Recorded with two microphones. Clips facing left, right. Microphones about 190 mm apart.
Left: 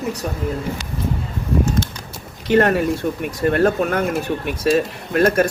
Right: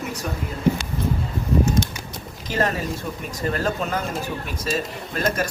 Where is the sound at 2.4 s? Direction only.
65° left (ahead or behind).